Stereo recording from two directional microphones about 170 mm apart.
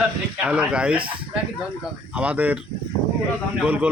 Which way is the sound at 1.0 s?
30° right (ahead or behind).